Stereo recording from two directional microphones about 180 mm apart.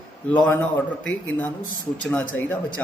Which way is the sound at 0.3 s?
10° left (ahead or behind).